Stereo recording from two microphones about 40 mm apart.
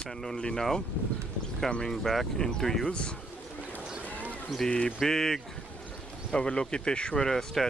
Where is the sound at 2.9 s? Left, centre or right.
Left.